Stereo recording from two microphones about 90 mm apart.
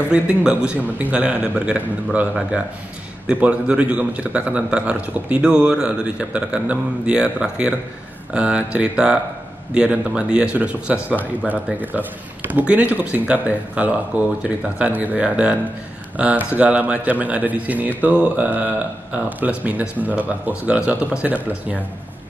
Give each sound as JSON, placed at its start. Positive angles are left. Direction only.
{"t": 0.1, "sound": "speech", "side_deg": -10}